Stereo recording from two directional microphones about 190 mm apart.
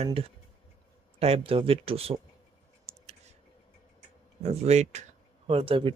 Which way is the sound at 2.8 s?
35° right (ahead or behind).